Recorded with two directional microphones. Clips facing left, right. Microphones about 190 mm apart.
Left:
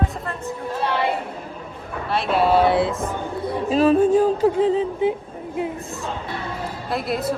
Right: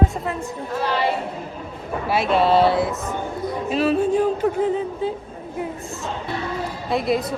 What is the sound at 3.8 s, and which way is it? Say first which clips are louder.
Music: left 3 dB; 40° left (ahead or behind).